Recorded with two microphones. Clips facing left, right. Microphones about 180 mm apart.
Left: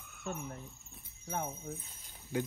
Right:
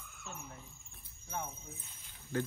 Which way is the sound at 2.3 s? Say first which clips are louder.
Left 1 dB; 10° left (ahead or behind).